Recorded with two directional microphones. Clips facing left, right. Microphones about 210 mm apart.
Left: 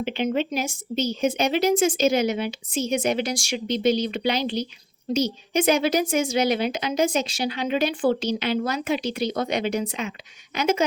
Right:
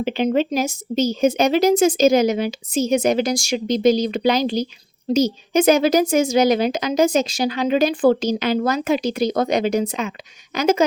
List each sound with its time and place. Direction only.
0.0 s a woman's voice: 40° right (ahead or behind)